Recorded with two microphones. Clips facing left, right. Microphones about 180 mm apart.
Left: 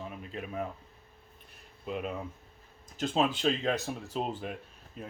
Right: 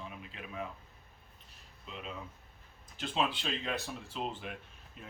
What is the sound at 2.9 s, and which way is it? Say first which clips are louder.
Speech: left 5 dB; 45° left (ahead or behind).